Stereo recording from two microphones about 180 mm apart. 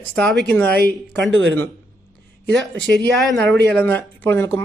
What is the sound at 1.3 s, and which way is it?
Speech, 90° right.